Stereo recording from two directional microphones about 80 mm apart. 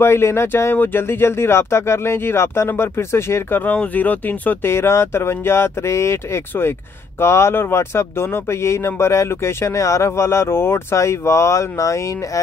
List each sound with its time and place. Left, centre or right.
0.0 s speech: left
3.6 s speech: left
4.7 s speech: left